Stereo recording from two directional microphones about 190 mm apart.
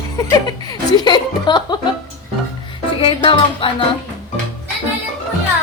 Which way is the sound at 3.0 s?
25° left (ahead or behind).